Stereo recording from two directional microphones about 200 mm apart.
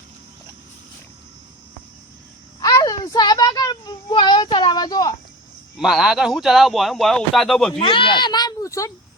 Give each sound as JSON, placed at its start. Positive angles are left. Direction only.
{"t": 2.6, "sound": "a sound", "side_deg": 20}
{"t": 5.7, "sound": "speech", "side_deg": 0}
{"t": 7.8, "sound": "a child's voice", "side_deg": 25}